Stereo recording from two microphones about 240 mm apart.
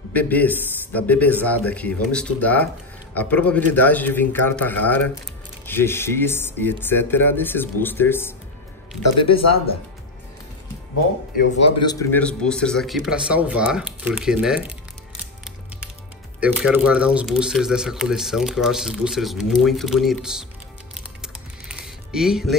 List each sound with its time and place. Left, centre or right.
0.1 s speech: centre
9.3 s speech: left
11.8 s speech: centre
16.3 s speech: centre
20.9 s music: centre